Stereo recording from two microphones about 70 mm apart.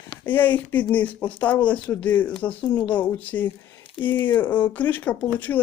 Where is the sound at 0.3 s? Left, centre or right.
Left.